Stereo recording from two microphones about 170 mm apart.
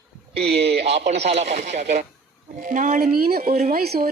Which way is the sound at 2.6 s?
55° right (ahead or behind).